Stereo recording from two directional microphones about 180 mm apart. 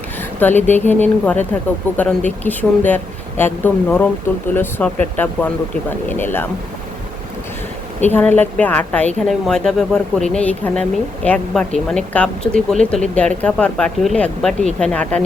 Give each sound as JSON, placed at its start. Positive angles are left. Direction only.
{"t": 0.3, "sound": "speech", "side_deg": 10}
{"t": 8.0, "sound": "a woman's voice", "side_deg": 10}